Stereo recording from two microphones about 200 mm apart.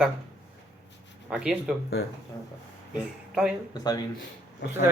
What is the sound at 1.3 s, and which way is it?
Speech, 5° right (ahead or behind).